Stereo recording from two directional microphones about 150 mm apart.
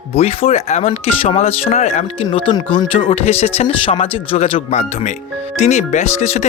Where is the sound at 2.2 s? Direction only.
30° left (ahead or behind).